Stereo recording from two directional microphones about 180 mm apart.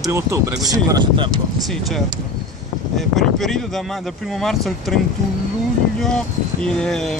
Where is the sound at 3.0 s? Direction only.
Centre (ahead or behind).